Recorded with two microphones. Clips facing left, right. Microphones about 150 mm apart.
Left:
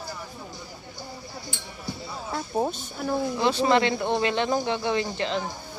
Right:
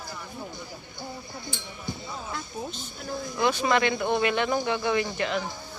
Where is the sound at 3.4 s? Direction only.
30° left (ahead or behind).